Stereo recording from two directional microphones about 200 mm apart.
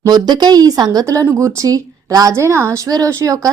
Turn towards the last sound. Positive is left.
turn(degrees=-15)  # may be behind; listen again after turning